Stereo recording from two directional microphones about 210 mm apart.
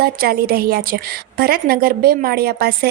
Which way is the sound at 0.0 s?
45° right (ahead or behind).